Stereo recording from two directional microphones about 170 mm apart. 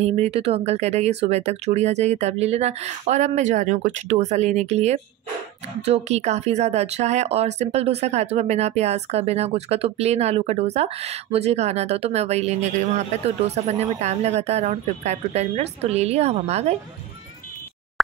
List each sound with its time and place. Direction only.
0.0 s speech: 40° right (ahead or behind)